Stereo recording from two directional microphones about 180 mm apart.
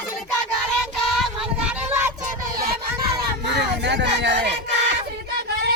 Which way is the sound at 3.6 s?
70° right (ahead or behind).